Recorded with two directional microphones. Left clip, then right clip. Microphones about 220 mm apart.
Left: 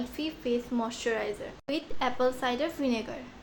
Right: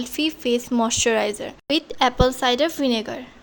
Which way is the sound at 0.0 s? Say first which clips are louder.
Right 10 dB; 55° right (ahead or behind).